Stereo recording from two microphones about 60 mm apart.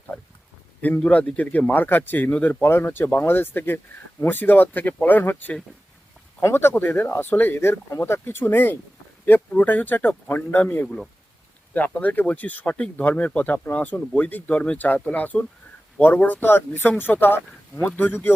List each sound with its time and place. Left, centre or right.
0.9 s speech: left
2.6 s speech: left
10.8 s speech: centre
11.7 s speech: left